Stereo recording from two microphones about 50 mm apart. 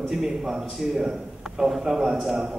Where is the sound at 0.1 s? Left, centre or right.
Centre.